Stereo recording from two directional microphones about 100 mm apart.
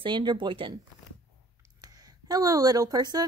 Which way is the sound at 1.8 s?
40° right (ahead or behind).